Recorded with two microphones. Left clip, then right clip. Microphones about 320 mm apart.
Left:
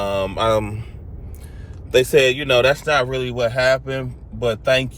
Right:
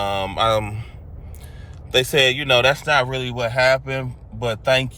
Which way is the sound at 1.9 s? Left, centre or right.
Centre.